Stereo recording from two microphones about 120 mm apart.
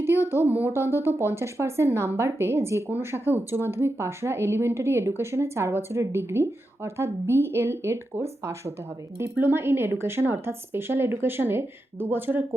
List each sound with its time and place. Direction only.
0.0 s speech: 20° right (ahead or behind)